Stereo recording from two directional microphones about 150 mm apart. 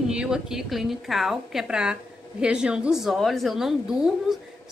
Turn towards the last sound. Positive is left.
turn(degrees=-5)  # may be behind; listen again after turning